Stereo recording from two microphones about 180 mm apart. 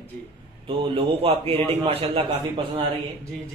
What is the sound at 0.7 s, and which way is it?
Speech, 30° right (ahead or behind).